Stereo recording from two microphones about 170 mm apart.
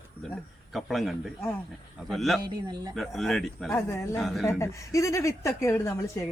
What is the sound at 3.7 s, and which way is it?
Speech, 15° left (ahead or behind).